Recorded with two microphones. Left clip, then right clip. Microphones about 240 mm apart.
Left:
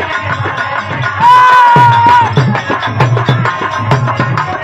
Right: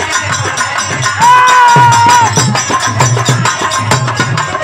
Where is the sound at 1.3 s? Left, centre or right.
Right.